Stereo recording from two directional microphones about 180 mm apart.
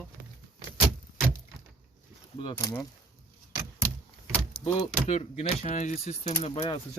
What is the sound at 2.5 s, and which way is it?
Speech, 20° left (ahead or behind).